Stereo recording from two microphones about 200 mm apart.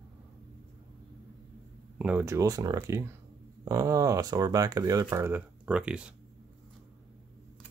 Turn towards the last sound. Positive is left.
turn(degrees=-5)  # may be behind; listen again after turning